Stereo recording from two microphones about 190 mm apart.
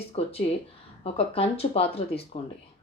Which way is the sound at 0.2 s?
30° left (ahead or behind).